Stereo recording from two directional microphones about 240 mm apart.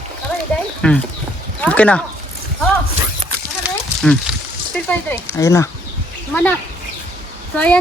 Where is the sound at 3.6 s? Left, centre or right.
Centre.